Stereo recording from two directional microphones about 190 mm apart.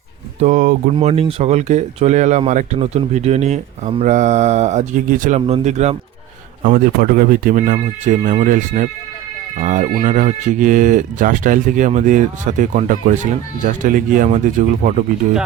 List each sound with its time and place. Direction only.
0.3 s speech: 40° right (ahead or behind)
0.9 s speech: 30° right (ahead or behind)